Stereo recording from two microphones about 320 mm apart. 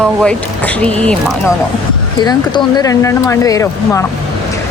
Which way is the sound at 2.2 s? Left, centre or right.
Centre.